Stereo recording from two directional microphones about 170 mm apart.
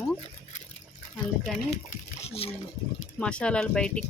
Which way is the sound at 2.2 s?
35° left (ahead or behind).